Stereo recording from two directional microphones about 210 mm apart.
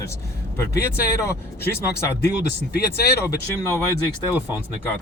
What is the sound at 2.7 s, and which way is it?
Speech, 50° left (ahead or behind).